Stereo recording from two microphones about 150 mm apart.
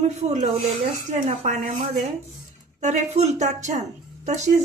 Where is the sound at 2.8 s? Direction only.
50° right (ahead or behind).